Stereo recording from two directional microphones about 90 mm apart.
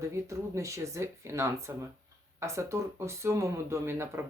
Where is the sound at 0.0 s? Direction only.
35° right (ahead or behind).